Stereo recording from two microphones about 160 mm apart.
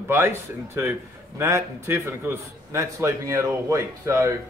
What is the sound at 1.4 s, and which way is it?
A man's voice, 15° right (ahead or behind).